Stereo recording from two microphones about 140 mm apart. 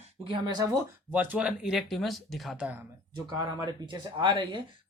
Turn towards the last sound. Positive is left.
turn(degrees=-35)  # may be behind; listen again after turning